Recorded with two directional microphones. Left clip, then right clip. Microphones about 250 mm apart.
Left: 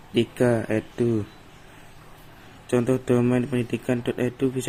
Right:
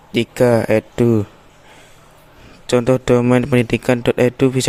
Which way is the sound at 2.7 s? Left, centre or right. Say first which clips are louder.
Right 8 dB; right.